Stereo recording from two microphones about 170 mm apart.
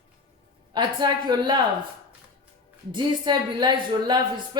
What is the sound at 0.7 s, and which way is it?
Speech, 25° right (ahead or behind).